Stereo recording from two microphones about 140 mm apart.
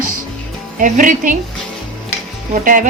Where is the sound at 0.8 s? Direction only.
70° right (ahead or behind).